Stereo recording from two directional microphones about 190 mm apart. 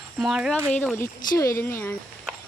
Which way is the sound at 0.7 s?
10° left (ahead or behind).